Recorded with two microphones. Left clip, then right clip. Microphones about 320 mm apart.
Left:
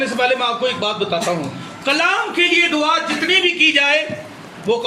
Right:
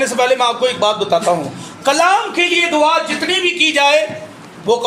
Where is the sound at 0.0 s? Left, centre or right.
Centre.